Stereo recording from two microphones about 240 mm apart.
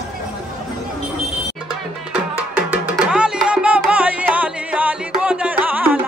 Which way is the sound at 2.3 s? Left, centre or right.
Centre.